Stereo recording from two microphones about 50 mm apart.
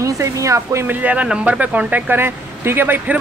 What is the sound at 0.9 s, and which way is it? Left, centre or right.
A man's voice, right.